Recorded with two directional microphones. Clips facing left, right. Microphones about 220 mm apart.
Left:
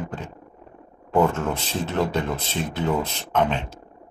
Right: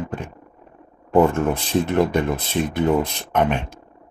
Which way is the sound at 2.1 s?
15° right (ahead or behind).